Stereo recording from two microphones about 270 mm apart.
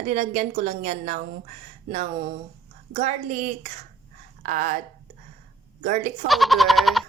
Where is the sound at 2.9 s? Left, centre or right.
Right.